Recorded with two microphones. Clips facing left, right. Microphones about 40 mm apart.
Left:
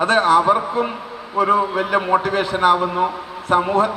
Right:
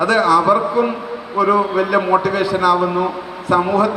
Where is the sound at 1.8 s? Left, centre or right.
Left.